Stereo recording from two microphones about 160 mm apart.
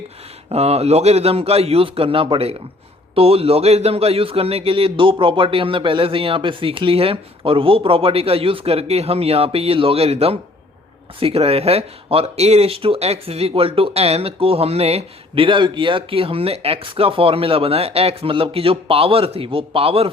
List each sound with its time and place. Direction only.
0.5 s speech: 40° right (ahead or behind)